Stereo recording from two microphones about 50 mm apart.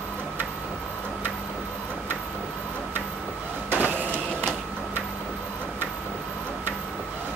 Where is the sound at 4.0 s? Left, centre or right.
Left.